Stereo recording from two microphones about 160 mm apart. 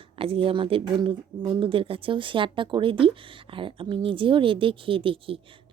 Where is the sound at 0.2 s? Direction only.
35° right (ahead or behind).